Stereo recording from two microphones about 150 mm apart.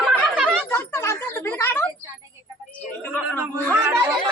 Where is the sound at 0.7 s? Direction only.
15° left (ahead or behind).